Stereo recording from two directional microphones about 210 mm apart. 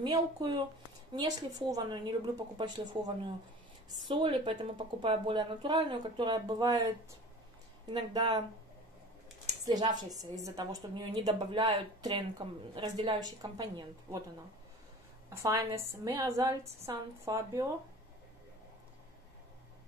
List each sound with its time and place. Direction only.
0.0 s speech: 20° right (ahead or behind)
4.1 s speech: 25° right (ahead or behind)
7.9 s speech: 20° right (ahead or behind)
9.7 s speech: 20° right (ahead or behind)
15.2 s a woman's voice: 15° right (ahead or behind)